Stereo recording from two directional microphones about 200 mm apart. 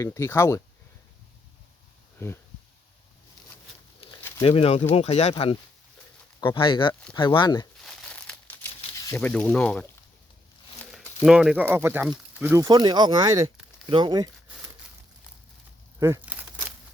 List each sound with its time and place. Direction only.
0.0 s speech: 15° left (ahead or behind)
2.1 s speech: 10° left (ahead or behind)
4.2 s bird: 10° left (ahead or behind)
4.4 s speech: 30° left (ahead or behind)
7.8 s crumpling: 5° left (ahead or behind)
9.0 s speech: 10° left (ahead or behind)
11.2 s speech: 5° right (ahead or behind)
12.6 s speech: 20° right (ahead or behind)
16.0 s crumpling: 15° right (ahead or behind)